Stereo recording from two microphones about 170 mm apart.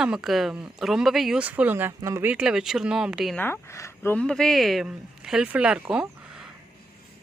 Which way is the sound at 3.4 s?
15° left (ahead or behind).